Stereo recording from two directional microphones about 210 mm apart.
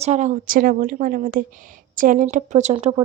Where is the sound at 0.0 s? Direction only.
35° right (ahead or behind).